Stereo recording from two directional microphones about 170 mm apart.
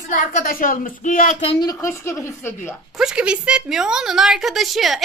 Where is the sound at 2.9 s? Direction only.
5° right (ahead or behind).